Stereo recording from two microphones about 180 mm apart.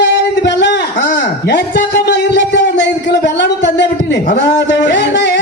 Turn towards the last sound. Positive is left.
turn(degrees=70)  # may be behind; listen again after turning